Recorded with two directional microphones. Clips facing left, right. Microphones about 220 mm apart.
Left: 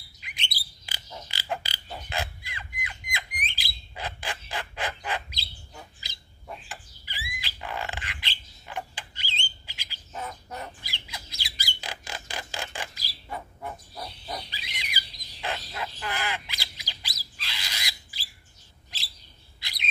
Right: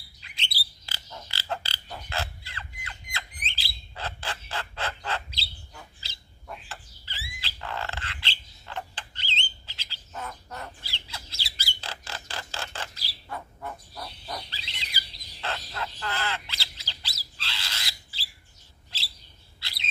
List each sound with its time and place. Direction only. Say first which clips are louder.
0.2 s bird: left 1 dB; 15° left (ahead or behind)
0.8 s mechanisms: left 2 dB; 15° left (ahead or behind)
9.7 s squawk: left 1 dB; 15° left (ahead or behind)
17.4 s a sound: even; 15° left (ahead or behind)
19.6 s bird: left 2 dB; 15° left (ahead or behind)